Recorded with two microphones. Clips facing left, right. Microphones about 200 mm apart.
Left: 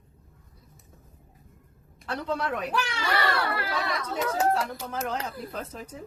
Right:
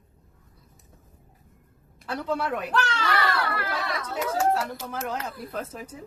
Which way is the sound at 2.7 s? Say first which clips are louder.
Right 2 dB; 10° left (ahead or behind).